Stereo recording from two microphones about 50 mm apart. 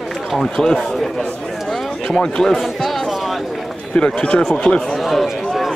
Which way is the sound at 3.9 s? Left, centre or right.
Left.